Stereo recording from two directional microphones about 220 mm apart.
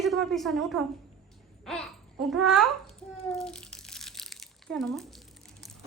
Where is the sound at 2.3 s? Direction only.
Centre (ahead or behind).